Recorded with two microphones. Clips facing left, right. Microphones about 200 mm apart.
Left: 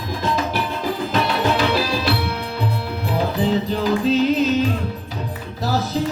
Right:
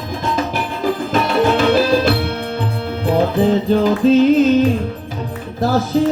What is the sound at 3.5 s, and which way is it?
Music, 50° right (ahead or behind).